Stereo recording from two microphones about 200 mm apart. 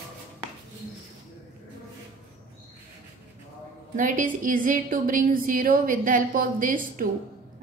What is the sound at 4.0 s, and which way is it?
A woman's voice, 40° right (ahead or behind).